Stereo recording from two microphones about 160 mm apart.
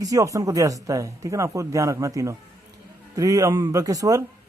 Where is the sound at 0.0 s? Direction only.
20° right (ahead or behind).